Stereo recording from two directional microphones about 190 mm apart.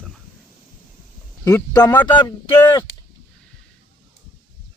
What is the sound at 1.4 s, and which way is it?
Speech, 15° left (ahead or behind).